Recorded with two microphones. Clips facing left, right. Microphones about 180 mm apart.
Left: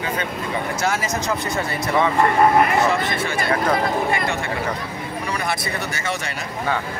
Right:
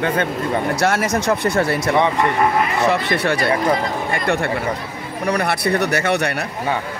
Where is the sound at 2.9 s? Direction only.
65° right (ahead or behind).